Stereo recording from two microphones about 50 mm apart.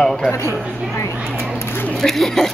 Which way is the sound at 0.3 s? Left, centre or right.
Left.